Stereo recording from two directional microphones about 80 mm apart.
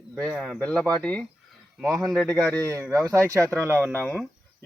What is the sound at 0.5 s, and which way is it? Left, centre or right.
Speech, centre.